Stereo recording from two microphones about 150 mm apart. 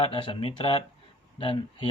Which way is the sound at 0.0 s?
35° left (ahead or behind).